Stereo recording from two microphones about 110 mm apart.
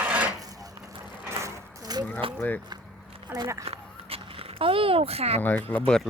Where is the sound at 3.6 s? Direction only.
60° right (ahead or behind).